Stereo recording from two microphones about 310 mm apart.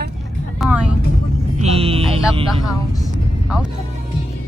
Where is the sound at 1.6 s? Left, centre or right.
Centre.